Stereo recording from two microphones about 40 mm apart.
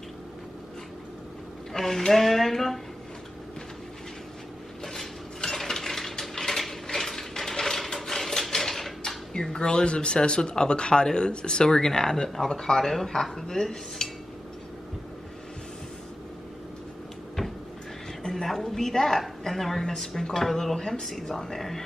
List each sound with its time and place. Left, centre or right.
1.7 s a woman's voice: centre
4.8 s dishes: centre
6.9 s a sound: centre
9.3 s speech: centre
18.3 s a woman's voice: centre